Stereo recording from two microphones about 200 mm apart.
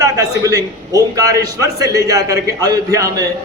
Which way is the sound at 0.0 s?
15° right (ahead or behind).